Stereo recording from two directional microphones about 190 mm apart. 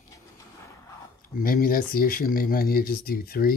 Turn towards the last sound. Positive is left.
turn(degrees=55)  # may be behind; listen again after turning